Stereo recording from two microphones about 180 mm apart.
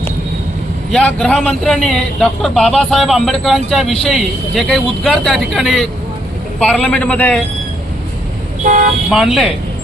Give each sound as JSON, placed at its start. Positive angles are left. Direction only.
{"t": 0.9, "sound": "a man's voice", "side_deg": 5}
{"t": 8.6, "sound": "speech", "side_deg": -50}
{"t": 9.1, "sound": "a man's voice", "side_deg": 0}